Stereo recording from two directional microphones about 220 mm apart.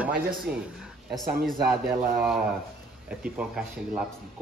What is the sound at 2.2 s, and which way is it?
Speech, 5° right (ahead or behind).